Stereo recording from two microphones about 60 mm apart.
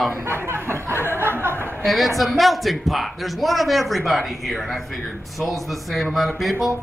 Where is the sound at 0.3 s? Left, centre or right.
Right.